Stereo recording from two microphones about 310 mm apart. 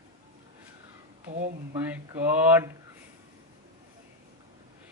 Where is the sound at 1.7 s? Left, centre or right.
Centre.